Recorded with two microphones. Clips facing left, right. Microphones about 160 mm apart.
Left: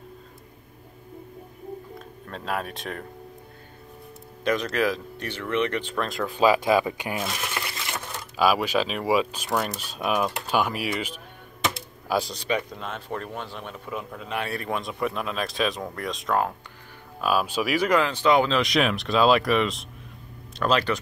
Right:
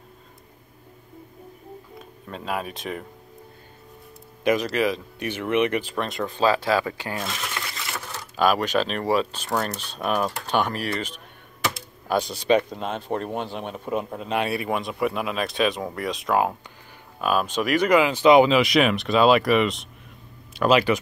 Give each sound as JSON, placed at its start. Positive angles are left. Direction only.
{"t": 2.2, "sound": "speech", "side_deg": -5}
{"t": 4.5, "sound": "speech", "side_deg": -5}
{"t": 5.2, "sound": "speech", "side_deg": -15}
{"t": 6.3, "sound": "speech", "side_deg": 10}
{"t": 7.5, "sound": "a sound", "side_deg": 20}
{"t": 8.4, "sound": "speech", "side_deg": 5}
{"t": 12.4, "sound": "speech", "side_deg": -25}
{"t": 14.3, "sound": "speech", "side_deg": -15}
{"t": 18.0, "sound": "speech", "side_deg": -15}
{"t": 18.6, "sound": "speech", "side_deg": 0}